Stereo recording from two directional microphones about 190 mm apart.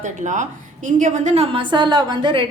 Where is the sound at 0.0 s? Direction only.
40° right (ahead or behind).